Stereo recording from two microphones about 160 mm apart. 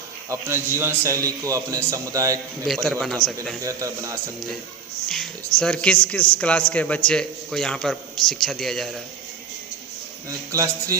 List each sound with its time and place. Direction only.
0.3 s a man's voice: 15° right (ahead or behind)
2.6 s a man's voice: 5° left (ahead or behind)
3.6 s a man's voice: 20° right (ahead or behind)
5.0 s a man's voice: centre (ahead or behind)
10.2 s a man's voice: 20° right (ahead or behind)